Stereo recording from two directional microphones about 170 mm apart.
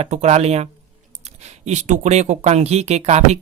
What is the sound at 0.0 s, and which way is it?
Speech, 40° right (ahead or behind).